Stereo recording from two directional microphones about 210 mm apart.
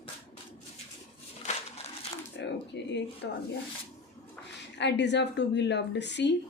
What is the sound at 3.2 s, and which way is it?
Speech, 55° left (ahead or behind).